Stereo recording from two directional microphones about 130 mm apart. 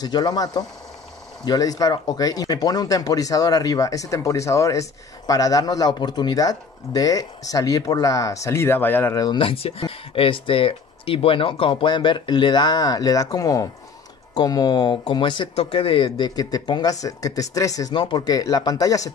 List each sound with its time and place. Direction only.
0.0 s speech: 30° left (ahead or behind); by 9.2 s 15° left (ahead or behind)
9.2 s speech: 40° left (ahead or behind)
15.5 s speech: 45° left (ahead or behind); by 19.1 s 25° left (ahead or behind)